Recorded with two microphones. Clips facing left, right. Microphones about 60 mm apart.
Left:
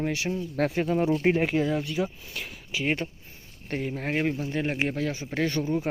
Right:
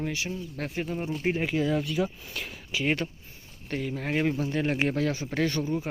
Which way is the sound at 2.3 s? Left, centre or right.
Centre.